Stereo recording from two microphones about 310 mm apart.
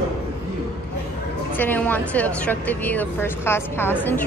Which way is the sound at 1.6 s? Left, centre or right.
Centre.